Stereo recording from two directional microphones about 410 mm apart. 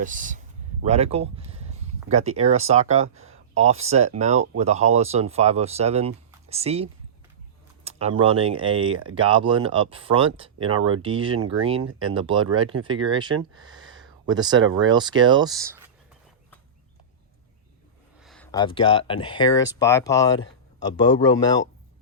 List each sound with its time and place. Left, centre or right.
0.0 s speech: centre
7.9 s speech: centre
13.6 s a sound: right
14.3 s speech: centre
18.2 s speech: centre